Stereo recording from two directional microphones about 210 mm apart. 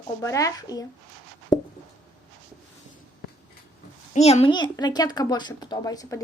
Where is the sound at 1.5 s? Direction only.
20° left (ahead or behind).